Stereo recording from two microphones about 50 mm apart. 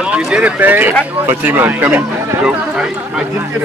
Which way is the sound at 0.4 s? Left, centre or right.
Right.